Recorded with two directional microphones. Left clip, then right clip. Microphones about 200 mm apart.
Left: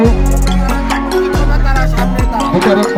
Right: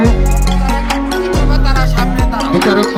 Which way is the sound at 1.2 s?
45° left (ahead or behind).